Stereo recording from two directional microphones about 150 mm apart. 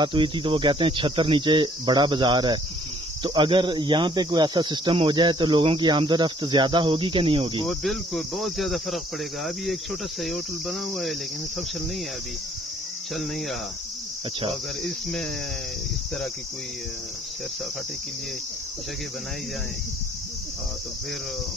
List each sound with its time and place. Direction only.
0.0 s speech: 30° right (ahead or behind)
7.6 s cricket: centre (ahead or behind)
13.1 s cricket: centre (ahead or behind)
14.8 s cricket: 5° left (ahead or behind)